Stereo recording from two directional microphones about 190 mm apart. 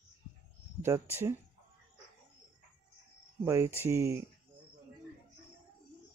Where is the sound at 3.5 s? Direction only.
15° right (ahead or behind).